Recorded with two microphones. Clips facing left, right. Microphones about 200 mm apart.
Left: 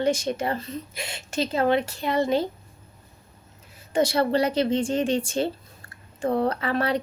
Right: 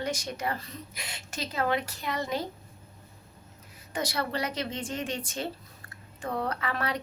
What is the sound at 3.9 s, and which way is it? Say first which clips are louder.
Speech: left 10 dB; 25° left (ahead or behind).